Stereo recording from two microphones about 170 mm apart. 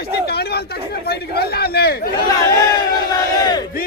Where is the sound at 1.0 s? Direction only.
70° left (ahead or behind).